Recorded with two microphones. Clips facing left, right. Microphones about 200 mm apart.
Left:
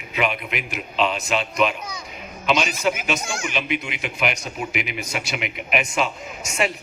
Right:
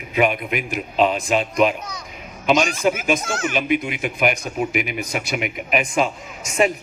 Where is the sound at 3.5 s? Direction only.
50° right (ahead or behind).